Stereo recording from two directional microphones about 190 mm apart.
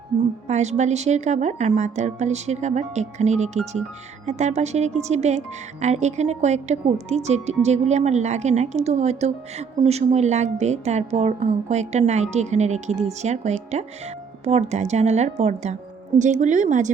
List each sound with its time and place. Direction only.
0.4 s a woman's voice: 35° right (ahead or behind)